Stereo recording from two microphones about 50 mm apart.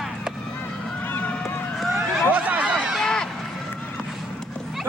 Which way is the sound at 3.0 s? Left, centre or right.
Centre.